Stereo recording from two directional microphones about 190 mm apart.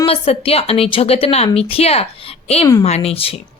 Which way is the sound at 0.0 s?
30° left (ahead or behind).